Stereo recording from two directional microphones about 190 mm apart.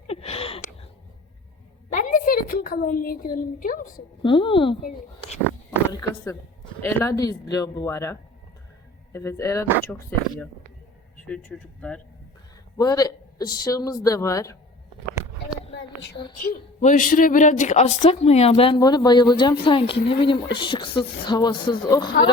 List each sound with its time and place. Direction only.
0.1 s a sound: 30° left (ahead or behind)
1.9 s a woman's voice: 45° left (ahead or behind)
4.2 s speech: 25° left (ahead or behind)
5.9 s speech: 20° left (ahead or behind)
11.3 s speech: 5° left (ahead or behind)
12.7 s speech: 20° left (ahead or behind)
15.7 s a sound: 70° left (ahead or behind)
16.5 s a woman's voice: 45° left (ahead or behind); by 22.1 s 20° left (ahead or behind)